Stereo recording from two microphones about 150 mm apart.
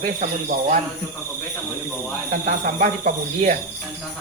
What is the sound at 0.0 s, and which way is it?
Speech, 65° right (ahead or behind).